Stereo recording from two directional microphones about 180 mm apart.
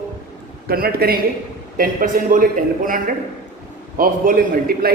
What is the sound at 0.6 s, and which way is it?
A man's voice, 55° right (ahead or behind).